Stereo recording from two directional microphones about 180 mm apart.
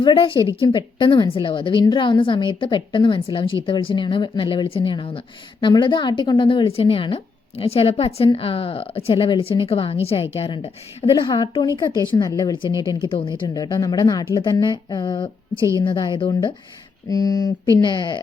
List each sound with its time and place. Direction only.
0.0 s a woman's voice: 30° left (ahead or behind)
15.5 s a woman's voice: 15° right (ahead or behind)
15.8 s a woman's voice: 25° left (ahead or behind)